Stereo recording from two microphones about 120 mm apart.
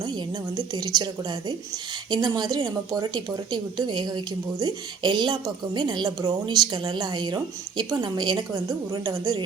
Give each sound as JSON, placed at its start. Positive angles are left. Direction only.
{"t": 0.0, "sound": "a woman's voice", "side_deg": -35}